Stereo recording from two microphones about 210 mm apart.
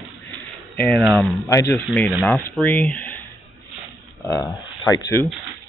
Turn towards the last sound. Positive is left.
turn(degrees=15)  # may be behind; listen again after turning